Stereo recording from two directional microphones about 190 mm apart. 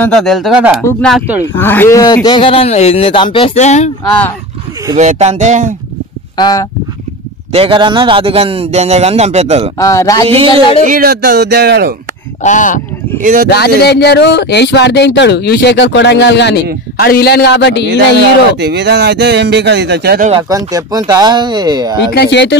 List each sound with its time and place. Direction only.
0.0 s speech: 5° left (ahead or behind)
1.4 s a man's voice: 10° left (ahead or behind); by 3.9 s 35° left (ahead or behind)
4.9 s a man's voice: 35° right (ahead or behind)
6.3 s a man's voice: 20° left (ahead or behind)
7.5 s a man's voice: 30° right (ahead or behind)
9.8 s speech: 15° left (ahead or behind)
10.2 s speech: 30° right (ahead or behind)
10.8 s speech: 45° right (ahead or behind)
12.4 s speech: 40° left (ahead or behind)
13.2 s speech: 45° right (ahead or behind)
13.5 s a man's voice: 60° left (ahead or behind)
18.6 s speech: 60° right (ahead or behind)
20.4 s speech: 20° right (ahead or behind)
22.1 s a man's voice: 65° left (ahead or behind)